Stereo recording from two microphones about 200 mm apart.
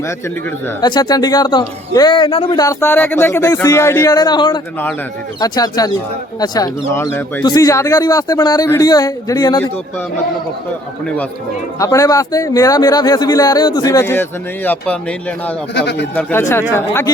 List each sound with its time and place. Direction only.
0.8 s a man's voice: 20° left (ahead or behind)
11.8 s a man's voice: 15° left (ahead or behind)
15.7 s speech: 60° left (ahead or behind)
16.1 s speech: 10° left (ahead or behind)